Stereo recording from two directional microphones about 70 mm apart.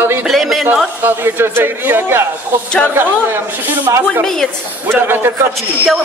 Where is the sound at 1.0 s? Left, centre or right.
Right.